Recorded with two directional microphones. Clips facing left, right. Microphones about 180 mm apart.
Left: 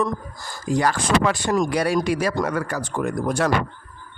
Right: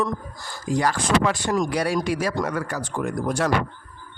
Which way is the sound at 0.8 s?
60° left (ahead or behind).